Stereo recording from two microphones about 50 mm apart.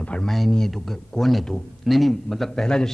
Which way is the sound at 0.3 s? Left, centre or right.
Centre.